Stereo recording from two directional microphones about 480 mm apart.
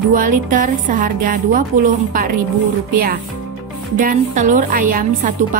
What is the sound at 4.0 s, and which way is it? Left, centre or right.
A woman's voice, centre.